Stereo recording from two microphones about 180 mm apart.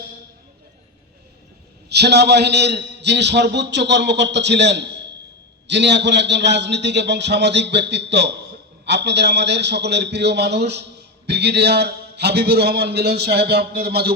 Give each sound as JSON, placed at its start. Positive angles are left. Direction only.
{"t": 1.9, "sound": "a man's voice", "side_deg": -65}